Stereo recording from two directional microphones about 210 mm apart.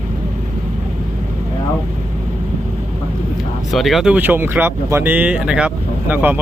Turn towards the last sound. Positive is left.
turn(degrees=-10)  # may be behind; listen again after turning